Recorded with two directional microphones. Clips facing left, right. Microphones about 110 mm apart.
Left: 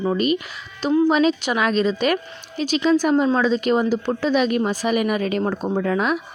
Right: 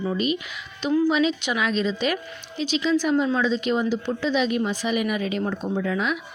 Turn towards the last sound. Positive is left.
turn(degrees=45)  # may be behind; listen again after turning